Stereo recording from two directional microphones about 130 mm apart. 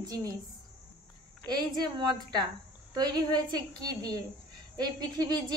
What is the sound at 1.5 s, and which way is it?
A woman's voice, 35° right (ahead or behind).